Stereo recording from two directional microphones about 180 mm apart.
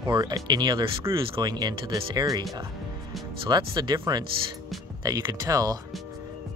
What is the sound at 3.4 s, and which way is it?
Speech, 25° right (ahead or behind).